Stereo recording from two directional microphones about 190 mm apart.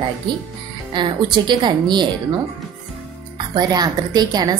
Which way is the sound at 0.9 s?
25° right (ahead or behind).